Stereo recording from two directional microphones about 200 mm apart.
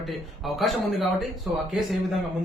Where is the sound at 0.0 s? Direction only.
Centre (ahead or behind).